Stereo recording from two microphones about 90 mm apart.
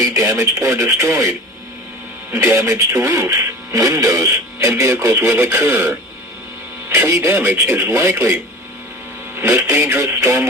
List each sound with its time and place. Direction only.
0.0 s speech: 35° right (ahead or behind)